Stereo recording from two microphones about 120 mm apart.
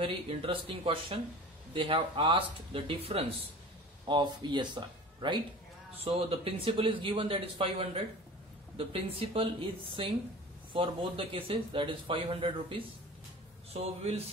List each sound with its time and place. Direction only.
0.0 s speech: 50° right (ahead or behind)
4.0 s speech: 40° right (ahead or behind)
5.9 s speech: 50° right (ahead or behind)
13.7 s speech: 60° right (ahead or behind)